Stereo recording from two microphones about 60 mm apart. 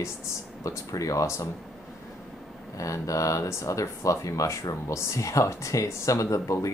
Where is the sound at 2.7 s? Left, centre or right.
Left.